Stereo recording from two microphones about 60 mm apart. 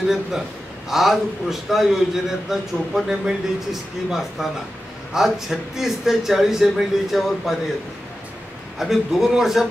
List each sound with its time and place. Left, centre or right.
0.8 s a man's voice: centre
8.7 s a man's voice: centre